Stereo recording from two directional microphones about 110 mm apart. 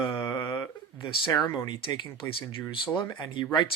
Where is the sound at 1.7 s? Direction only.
45° left (ahead or behind).